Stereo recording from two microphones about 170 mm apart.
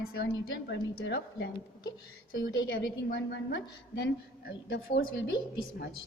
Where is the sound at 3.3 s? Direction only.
90° left.